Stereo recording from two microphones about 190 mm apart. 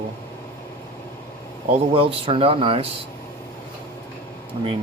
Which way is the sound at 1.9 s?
30° right (ahead or behind).